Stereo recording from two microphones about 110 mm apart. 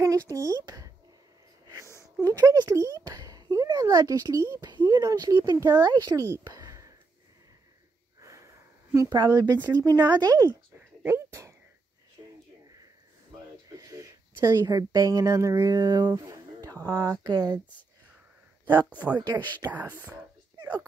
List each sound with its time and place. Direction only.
0.0 s speech: 30° right (ahead or behind)
1.9 s a sound: 25° left (ahead or behind)
2.2 s speech: 30° right (ahead or behind)
6.4 s a sound: 35° right (ahead or behind)
8.2 s sniff: 30° right (ahead or behind)
9.1 s speech: 40° right (ahead or behind)
12.2 s a sound: 35° right (ahead or behind)
13.7 s speech: 30° right (ahead or behind)
18.7 s speech: 15° right (ahead or behind)